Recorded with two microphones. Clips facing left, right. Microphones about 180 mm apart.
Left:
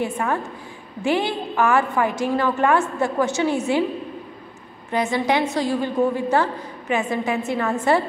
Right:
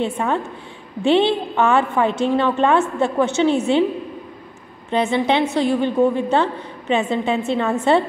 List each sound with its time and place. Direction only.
0.0 s a woman's voice: 20° right (ahead or behind)
4.9 s a woman's voice: 25° right (ahead or behind)